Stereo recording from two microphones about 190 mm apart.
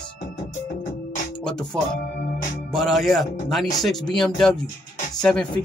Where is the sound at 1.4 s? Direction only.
5° left (ahead or behind).